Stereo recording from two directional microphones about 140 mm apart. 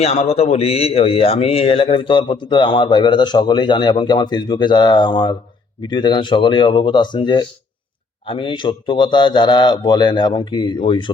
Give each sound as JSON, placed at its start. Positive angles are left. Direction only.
{"t": 0.0, "sound": "a man's voice", "side_deg": 45}